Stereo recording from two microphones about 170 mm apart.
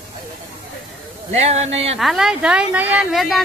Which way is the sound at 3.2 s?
Centre (ahead or behind).